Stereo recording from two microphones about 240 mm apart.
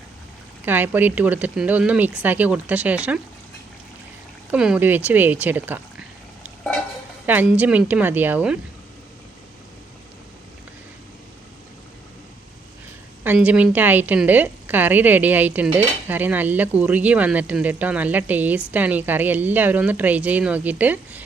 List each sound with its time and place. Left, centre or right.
0.6 s a woman's voice: centre
4.5 s a woman's voice: centre
13.2 s a woman's voice: centre